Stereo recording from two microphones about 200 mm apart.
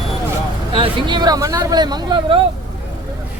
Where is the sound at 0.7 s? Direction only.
25° right (ahead or behind).